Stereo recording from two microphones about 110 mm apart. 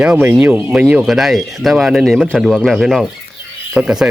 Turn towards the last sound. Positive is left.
turn(degrees=-5)  # may be behind; listen again after turning